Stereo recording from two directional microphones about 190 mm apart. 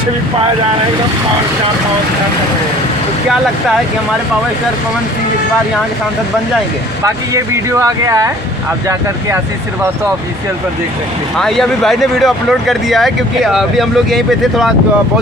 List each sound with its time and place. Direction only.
7.0 s speech: 15° right (ahead or behind)
11.3 s speech: centre (ahead or behind)